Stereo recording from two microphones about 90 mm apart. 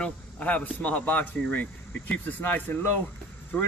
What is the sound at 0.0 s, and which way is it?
A man's voice, 15° left (ahead or behind).